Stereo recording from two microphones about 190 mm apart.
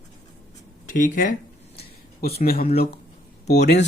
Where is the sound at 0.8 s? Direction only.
45° left (ahead or behind).